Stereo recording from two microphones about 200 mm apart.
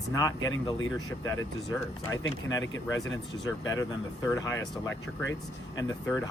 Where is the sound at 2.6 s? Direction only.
70° left (ahead or behind).